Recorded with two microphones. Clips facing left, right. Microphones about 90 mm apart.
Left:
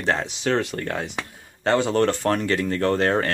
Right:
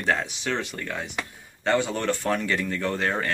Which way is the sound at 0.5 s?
50° left (ahead or behind).